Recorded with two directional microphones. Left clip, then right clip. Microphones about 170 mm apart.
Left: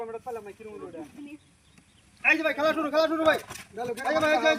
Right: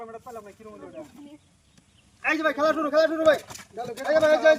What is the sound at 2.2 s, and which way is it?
Speech, 10° right (ahead or behind).